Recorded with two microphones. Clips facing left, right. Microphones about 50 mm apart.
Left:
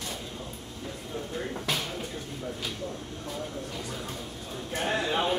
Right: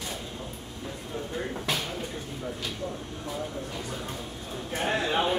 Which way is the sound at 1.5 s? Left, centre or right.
Centre.